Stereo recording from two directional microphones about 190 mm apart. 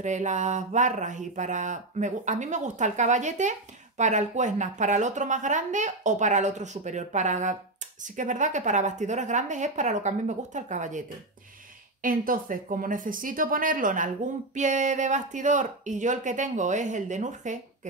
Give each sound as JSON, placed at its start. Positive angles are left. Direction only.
{"t": 0.0, "sound": "speech", "side_deg": -40}